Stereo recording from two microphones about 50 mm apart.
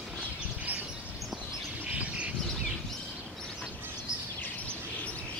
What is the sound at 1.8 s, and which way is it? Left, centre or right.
Bird, right.